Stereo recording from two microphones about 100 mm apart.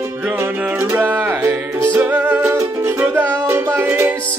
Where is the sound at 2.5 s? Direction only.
30° right (ahead or behind).